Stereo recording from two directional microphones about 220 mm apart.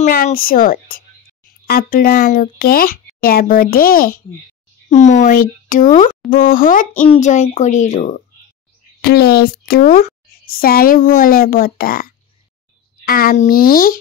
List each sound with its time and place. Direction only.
0.0 s speech: 40° left (ahead or behind)
9.0 s speech: 45° left (ahead or behind)